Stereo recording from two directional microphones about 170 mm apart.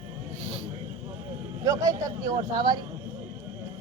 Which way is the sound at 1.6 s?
20° right (ahead or behind).